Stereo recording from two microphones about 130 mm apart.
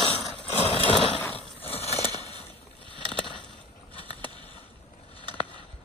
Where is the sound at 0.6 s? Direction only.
50° left (ahead or behind).